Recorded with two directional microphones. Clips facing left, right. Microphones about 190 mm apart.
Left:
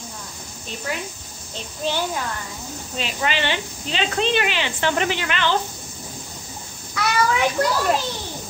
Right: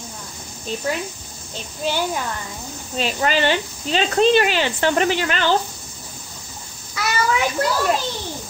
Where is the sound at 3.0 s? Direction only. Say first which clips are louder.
Right 5 dB; 40° right (ahead or behind).